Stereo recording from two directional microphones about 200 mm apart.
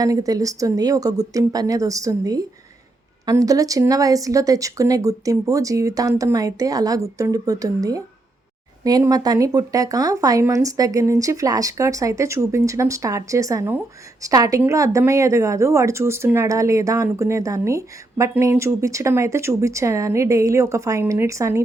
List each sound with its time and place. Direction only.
0.0 s speech: 15° right (ahead or behind)